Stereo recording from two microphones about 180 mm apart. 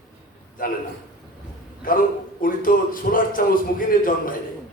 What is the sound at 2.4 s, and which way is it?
Speech, 50° left (ahead or behind).